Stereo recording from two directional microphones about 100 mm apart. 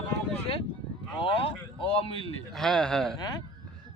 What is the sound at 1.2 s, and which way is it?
Speech, 65° left (ahead or behind).